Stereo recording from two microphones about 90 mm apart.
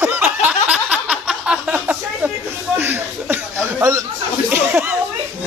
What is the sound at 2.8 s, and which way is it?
Chuckle, 25° right (ahead or behind).